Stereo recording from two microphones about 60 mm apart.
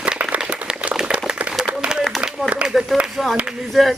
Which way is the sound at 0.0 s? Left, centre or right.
Centre.